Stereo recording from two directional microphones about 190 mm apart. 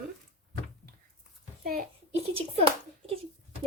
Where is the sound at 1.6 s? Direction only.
50° right (ahead or behind).